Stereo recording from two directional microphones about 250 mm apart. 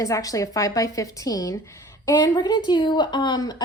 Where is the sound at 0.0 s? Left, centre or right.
Centre.